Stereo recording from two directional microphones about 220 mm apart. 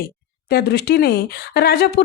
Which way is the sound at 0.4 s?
45° left (ahead or behind).